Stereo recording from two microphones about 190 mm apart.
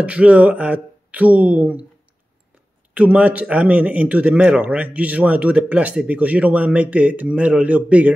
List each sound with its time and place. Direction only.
0.0 s a man's voice: 5° right (ahead or behind)
2.9 s a man's voice: 5° right (ahead or behind)